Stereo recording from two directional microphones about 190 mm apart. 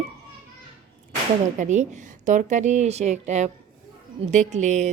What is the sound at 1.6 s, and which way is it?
A woman's voice, 40° right (ahead or behind).